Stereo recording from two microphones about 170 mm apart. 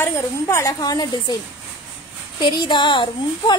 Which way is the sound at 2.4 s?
25° left (ahead or behind).